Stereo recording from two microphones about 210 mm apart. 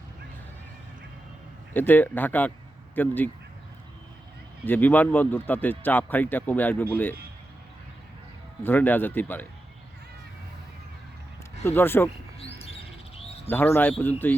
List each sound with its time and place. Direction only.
1.7 s speech: 10° left (ahead or behind)
4.6 s speech: 10° left (ahead or behind)
8.6 s speech: 10° left (ahead or behind)
11.6 s speech: 10° left (ahead or behind)
12.0 s bird: 30° left (ahead or behind)
13.5 s speech: 10° left (ahead or behind)